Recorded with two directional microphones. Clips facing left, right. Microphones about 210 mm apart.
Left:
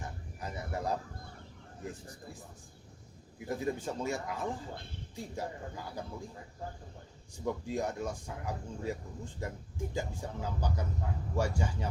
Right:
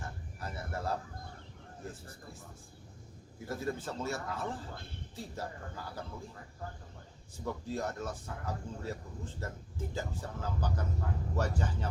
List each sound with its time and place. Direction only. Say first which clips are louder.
0.0 s a sound: left 1 dB; 15° left (ahead or behind)
1.8 s speech: left 3 dB; 15° left (ahead or behind)
3.4 s speech: left 2 dB; 15° left (ahead or behind)
7.3 s speech: left 3 dB; 15° left (ahead or behind)